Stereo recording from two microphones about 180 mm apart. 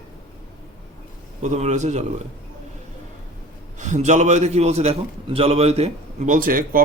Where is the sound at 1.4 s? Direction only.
40° right (ahead or behind).